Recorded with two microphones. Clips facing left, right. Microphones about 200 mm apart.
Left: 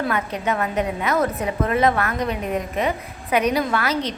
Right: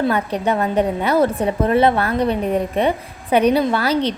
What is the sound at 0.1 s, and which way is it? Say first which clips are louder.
A woman's voice: right 4 dB; 35° right (ahead or behind).